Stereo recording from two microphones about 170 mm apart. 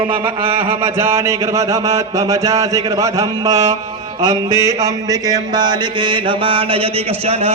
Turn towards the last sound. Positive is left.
turn(degrees=-35)  # may be behind; listen again after turning